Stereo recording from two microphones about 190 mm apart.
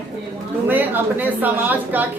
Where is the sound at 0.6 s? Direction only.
10° right (ahead or behind).